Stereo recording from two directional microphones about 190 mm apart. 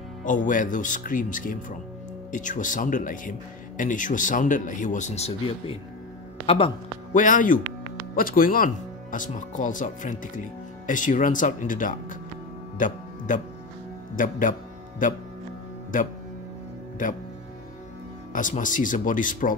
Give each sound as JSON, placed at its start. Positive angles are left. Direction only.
{"t": 0.2, "sound": "speech", "side_deg": 40}
{"t": 7.2, "sound": "speech", "side_deg": 45}
{"t": 12.7, "sound": "music", "side_deg": 45}
{"t": 14.1, "sound": "speech", "side_deg": 45}
{"t": 18.3, "sound": "speech", "side_deg": 45}